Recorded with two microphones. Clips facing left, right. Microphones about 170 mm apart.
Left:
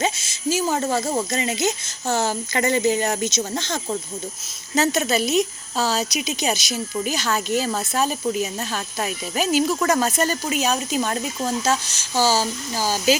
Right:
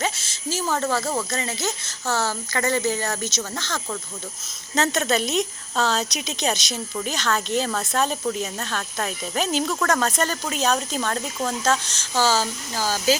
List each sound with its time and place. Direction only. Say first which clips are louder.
0.0 s speech: left 4 dB; 15° left (ahead or behind)
4.7 s speech: left 2 dB; 5° left (ahead or behind)